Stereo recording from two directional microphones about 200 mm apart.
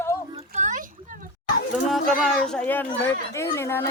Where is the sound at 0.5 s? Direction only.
35° right (ahead or behind).